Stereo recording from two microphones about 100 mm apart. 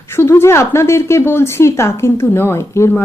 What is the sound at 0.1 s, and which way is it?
A woman's voice, 25° left (ahead or behind).